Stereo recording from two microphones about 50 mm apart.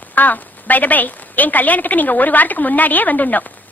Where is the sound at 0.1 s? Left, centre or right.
Left.